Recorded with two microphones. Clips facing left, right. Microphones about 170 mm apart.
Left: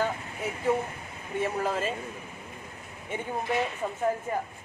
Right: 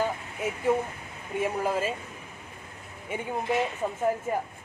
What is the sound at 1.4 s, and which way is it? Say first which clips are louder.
Speech: right 1 dB; 10° right (ahead or behind).